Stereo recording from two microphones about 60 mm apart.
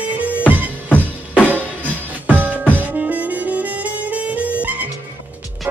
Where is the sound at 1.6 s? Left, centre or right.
Right.